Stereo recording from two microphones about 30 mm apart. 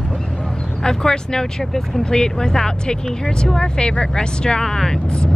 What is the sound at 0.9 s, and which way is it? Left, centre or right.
Speech, left.